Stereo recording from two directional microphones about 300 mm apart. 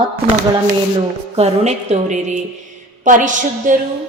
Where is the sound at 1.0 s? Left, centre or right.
Right.